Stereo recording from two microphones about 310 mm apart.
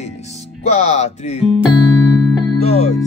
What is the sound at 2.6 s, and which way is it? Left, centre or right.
Speech, left.